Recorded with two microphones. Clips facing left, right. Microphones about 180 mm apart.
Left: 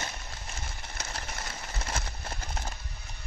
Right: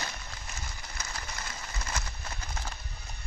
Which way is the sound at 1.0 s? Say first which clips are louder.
Left 1 dB; 25° left (ahead or behind).